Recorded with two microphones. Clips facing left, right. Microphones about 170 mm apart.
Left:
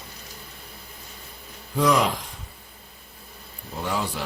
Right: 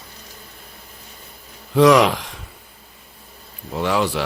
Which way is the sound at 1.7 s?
85° right.